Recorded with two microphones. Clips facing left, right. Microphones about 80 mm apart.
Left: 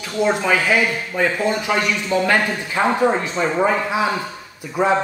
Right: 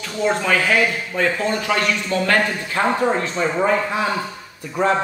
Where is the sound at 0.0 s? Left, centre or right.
Centre.